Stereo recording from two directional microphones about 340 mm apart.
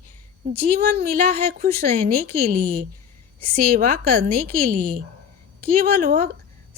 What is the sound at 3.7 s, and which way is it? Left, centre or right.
Speech, right.